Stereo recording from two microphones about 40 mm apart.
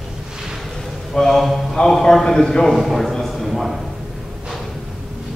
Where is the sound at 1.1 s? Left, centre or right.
Centre.